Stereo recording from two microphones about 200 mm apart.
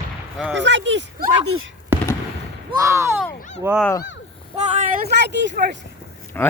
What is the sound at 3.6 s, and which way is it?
Speech, 10° right (ahead or behind).